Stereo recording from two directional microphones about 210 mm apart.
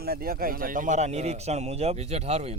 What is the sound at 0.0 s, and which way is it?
A man's voice, 45° right (ahead or behind).